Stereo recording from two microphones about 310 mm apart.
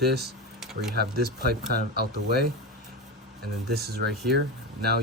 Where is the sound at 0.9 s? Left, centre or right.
Right.